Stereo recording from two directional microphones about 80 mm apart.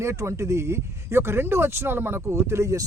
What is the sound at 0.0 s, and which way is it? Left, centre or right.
Speech, right.